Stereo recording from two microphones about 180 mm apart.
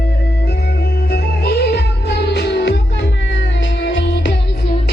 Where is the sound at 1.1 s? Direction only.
60° left (ahead or behind); by 4.4 s 85° left.